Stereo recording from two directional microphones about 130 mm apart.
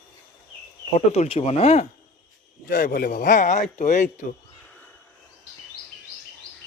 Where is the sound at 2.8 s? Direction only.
90° left; by 4.1 s 70° left (ahead or behind).